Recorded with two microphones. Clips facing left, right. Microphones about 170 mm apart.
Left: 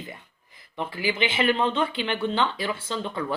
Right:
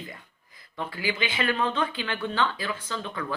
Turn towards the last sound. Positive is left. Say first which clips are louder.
# left 3 dB
turn(degrees=30)  # may be behind; listen again after turning